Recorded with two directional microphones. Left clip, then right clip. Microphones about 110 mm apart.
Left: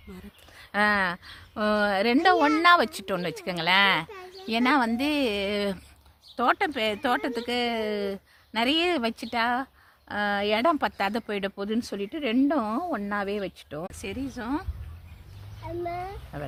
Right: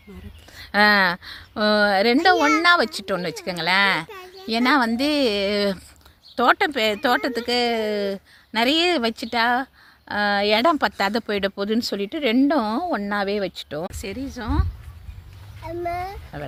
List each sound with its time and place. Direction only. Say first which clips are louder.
0.5 s speech: right 7 dB; 55° right (ahead or behind)
1.5 s speech: right 6 dB; 30° right (ahead or behind)
2.2 s speech: right 1 dB; 5° right (ahead or behind)
4.5 s speech: right 4 dB; 35° right (ahead or behind)
14.0 s speech: right 3 dB; 30° right (ahead or behind)
16.3 s speech: right 2 dB; 20° right (ahead or behind)